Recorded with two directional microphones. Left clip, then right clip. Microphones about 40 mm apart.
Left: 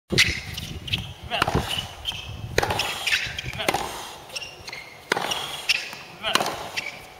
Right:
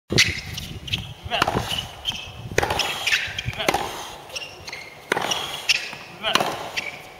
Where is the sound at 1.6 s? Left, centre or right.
Centre.